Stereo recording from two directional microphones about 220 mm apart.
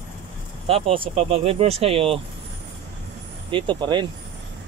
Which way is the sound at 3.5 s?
20° right (ahead or behind).